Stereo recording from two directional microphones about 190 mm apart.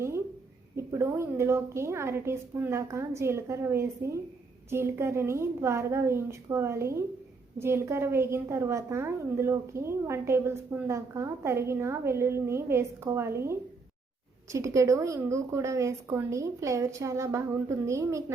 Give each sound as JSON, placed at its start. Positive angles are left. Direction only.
{"t": 0.8, "sound": "a woman's voice", "side_deg": -15}